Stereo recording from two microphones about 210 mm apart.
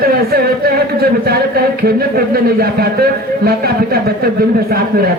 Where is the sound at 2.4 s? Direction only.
45° right (ahead or behind).